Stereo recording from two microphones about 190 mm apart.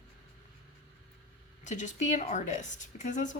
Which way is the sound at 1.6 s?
40° left (ahead or behind).